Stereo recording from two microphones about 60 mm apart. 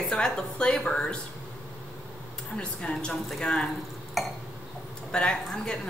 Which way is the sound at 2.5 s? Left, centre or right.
Centre.